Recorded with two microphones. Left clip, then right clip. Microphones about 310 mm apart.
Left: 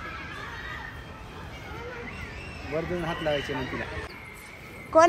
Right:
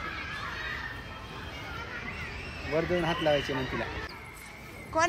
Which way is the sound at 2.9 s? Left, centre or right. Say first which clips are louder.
Right 2 dB; right.